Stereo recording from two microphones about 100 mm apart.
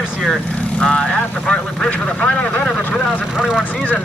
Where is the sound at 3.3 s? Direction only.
10° right (ahead or behind).